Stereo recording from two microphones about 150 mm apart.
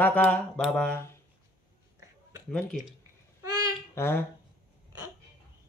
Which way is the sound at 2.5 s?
5° left (ahead or behind).